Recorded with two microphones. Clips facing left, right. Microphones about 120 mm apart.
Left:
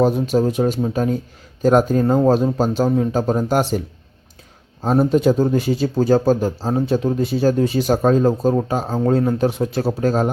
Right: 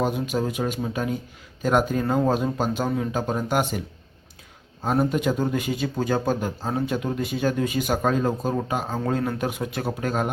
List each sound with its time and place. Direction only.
0.0 s speech: 35° left (ahead or behind)